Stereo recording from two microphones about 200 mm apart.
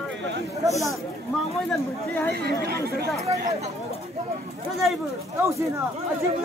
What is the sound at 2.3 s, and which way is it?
Speech, 55° right (ahead or behind).